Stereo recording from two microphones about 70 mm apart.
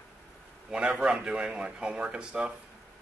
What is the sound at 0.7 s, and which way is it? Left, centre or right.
Speech, centre.